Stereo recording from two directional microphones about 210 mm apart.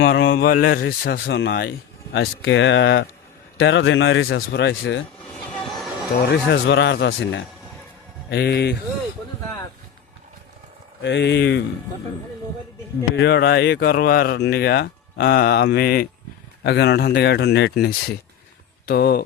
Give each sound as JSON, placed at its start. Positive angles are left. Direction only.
{"t": 0.0, "sound": "speech", "side_deg": 50}
{"t": 1.3, "sound": "a man's voice", "side_deg": 60}
{"t": 5.5, "sound": "a sound", "side_deg": 0}
{"t": 6.2, "sound": "a man's voice", "side_deg": 55}
{"t": 8.3, "sound": "speech", "side_deg": 50}
{"t": 11.0, "sound": "a man's voice", "side_deg": 55}
{"t": 13.1, "sound": "speech", "side_deg": 50}